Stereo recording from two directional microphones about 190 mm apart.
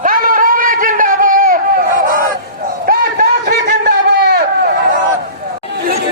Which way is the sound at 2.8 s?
55° right (ahead or behind).